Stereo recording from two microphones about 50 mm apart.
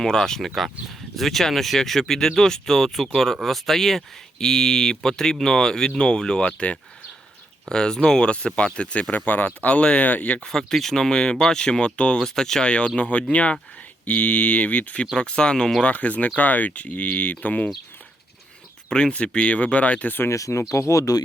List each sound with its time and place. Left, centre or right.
0.0 s speech: centre
0.5 s speech: centre; by 9.1 s left
9.1 s speech: left
10.4 s speech: centre; by 12.2 s left
12.2 s speech: centre; by 15.0 s left
15.1 s speech: centre
15.8 s speech: left
18.9 s speech: centre
20.3 s speech: left